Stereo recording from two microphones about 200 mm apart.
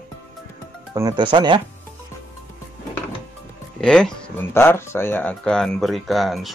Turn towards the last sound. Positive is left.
turn(degrees=0)  # may be behind; listen again after turning